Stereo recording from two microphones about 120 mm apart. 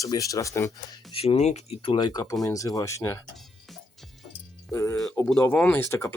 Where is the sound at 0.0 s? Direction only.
30° left (ahead or behind).